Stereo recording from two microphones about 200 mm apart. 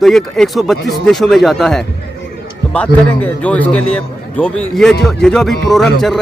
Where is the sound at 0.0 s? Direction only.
Centre (ahead or behind).